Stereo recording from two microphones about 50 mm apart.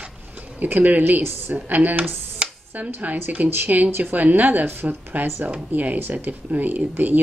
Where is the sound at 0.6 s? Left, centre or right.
Right.